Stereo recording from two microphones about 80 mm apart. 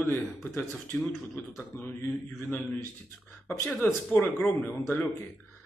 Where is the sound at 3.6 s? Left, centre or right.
Centre.